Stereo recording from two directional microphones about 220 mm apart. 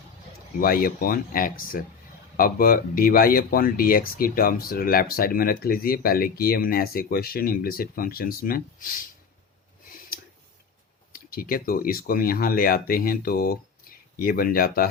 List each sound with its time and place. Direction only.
0.6 s speech: 40° left (ahead or behind)
9.8 s a sound: 40° left (ahead or behind)
11.1 s speech: 40° left (ahead or behind)